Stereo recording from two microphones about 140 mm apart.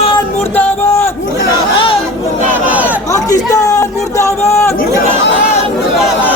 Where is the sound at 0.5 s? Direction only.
15° left (ahead or behind).